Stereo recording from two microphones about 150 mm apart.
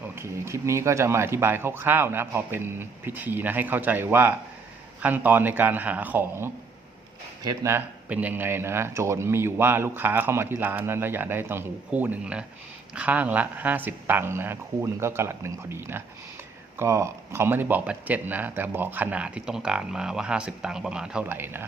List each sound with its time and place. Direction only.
0.2 s speech: 20° right (ahead or behind)